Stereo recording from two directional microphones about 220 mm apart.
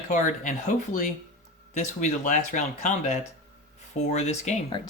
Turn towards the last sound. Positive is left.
turn(degrees=30)  # may be behind; listen again after turning